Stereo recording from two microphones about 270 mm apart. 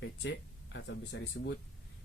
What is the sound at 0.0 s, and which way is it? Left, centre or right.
Speech, left.